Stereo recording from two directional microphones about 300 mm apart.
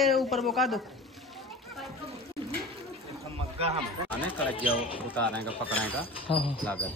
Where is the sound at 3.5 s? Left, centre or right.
Centre.